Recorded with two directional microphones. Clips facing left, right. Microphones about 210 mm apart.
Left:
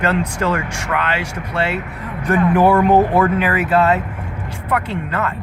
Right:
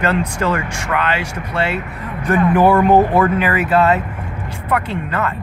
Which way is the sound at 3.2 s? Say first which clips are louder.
Right 1 dB; 40° left (ahead or behind).